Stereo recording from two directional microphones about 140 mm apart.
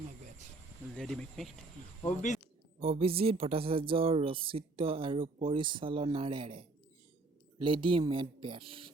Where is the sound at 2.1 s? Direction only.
60° left (ahead or behind).